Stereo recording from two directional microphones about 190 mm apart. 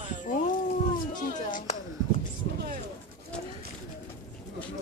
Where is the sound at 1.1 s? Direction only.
45° left (ahead or behind).